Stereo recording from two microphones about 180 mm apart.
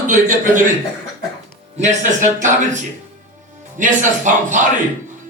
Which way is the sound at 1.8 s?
40° right (ahead or behind).